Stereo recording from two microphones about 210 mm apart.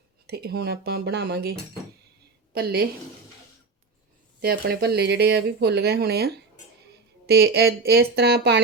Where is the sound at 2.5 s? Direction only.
50° right (ahead or behind).